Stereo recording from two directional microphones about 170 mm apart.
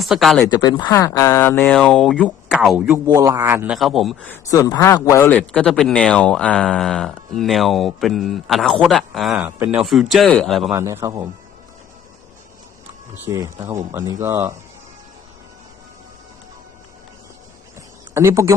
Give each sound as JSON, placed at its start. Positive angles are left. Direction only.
{"t": 0.0, "sound": "speech", "side_deg": 0}
{"t": 0.4, "sound": "speech", "side_deg": 25}
{"t": 2.8, "sound": "a man's voice", "side_deg": -15}
{"t": 3.8, "sound": "speech", "side_deg": 0}
{"t": 4.3, "sound": "speech", "side_deg": 20}
{"t": 5.3, "sound": "speech", "side_deg": 5}
{"t": 10.7, "sound": "a man's voice", "side_deg": -15}
{"t": 13.2, "sound": "speech", "side_deg": -15}
{"t": 17.7, "sound": "a sound", "side_deg": -15}